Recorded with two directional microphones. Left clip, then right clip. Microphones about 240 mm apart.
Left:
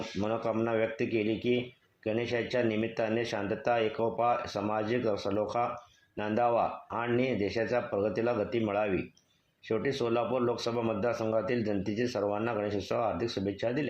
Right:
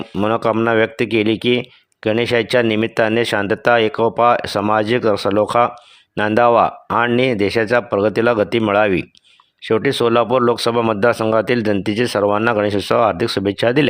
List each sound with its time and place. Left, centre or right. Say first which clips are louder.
0.2 s speech: right 15 dB; right